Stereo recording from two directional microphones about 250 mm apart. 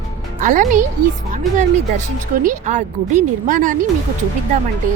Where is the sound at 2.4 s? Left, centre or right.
Right.